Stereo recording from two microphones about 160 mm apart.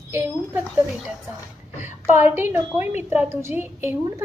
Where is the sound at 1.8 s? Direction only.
15° right (ahead or behind).